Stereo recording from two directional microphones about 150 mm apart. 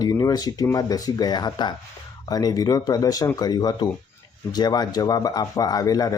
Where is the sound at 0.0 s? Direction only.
25° left (ahead or behind).